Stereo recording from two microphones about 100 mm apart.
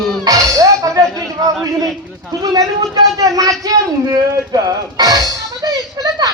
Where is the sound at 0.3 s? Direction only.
35° right (ahead or behind).